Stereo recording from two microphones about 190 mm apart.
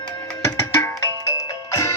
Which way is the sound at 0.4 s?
15° left (ahead or behind).